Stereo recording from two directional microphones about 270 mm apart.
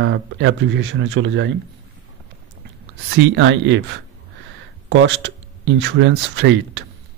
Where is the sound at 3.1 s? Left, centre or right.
Right.